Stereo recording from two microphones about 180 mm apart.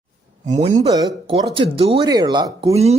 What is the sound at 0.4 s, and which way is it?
Speech, 40° right (ahead or behind).